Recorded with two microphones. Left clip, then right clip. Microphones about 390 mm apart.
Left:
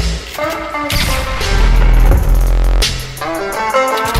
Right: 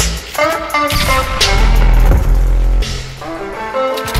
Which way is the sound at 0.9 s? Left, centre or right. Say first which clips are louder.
Right 3 dB; centre.